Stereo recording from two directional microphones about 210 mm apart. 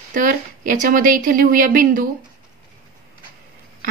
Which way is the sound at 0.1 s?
40° right (ahead or behind).